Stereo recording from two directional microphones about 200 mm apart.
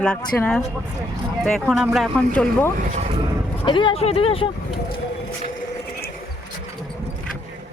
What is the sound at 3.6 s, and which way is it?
Speech, 25° left (ahead or behind).